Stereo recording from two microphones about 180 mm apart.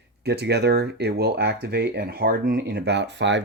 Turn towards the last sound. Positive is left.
turn(degrees=-75)  # may be behind; listen again after turning